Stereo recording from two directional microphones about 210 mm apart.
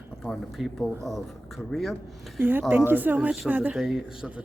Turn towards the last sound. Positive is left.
turn(degrees=-5)  # may be behind; listen again after turning